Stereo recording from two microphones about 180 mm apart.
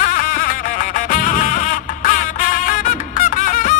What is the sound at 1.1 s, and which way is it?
Music, 50° left (ahead or behind).